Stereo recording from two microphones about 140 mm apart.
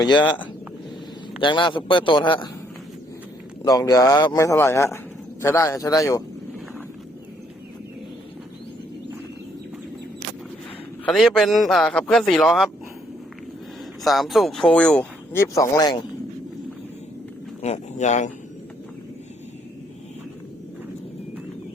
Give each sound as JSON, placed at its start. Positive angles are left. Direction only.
{"t": 0.0, "sound": "a man's voice", "side_deg": 30}
{"t": 1.4, "sound": "a man's voice", "side_deg": 35}
{"t": 3.6, "sound": "speech", "side_deg": 25}
{"t": 11.0, "sound": "a man's voice", "side_deg": 5}
{"t": 14.0, "sound": "speech", "side_deg": 0}
{"t": 17.6, "sound": "a man's voice", "side_deg": 55}